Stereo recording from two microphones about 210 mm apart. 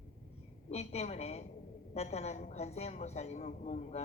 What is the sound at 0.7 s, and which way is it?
A woman's voice, 30° left (ahead or behind).